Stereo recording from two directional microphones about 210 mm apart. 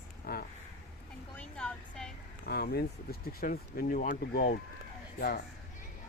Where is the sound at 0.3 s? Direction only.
45° left (ahead or behind).